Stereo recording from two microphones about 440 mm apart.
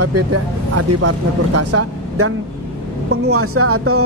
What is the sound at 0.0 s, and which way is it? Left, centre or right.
Speech, right.